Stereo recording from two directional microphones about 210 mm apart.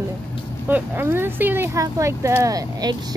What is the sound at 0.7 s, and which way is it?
Speech, 10° right (ahead or behind).